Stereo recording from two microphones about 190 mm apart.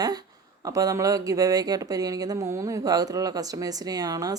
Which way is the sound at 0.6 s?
20° right (ahead or behind).